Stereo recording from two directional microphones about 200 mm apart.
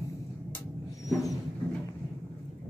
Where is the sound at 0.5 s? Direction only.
15° left (ahead or behind).